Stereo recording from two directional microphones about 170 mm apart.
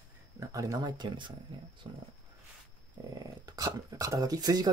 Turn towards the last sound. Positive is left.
turn(degrees=-20)  # may be behind; listen again after turning